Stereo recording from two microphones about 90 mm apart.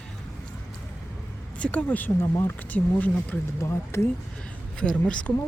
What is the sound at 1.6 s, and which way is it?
Speech, 15° left (ahead or behind).